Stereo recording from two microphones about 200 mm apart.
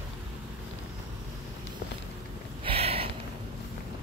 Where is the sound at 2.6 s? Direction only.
30° right (ahead or behind).